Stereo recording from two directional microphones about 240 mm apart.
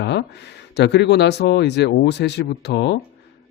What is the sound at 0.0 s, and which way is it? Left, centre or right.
Speech, left.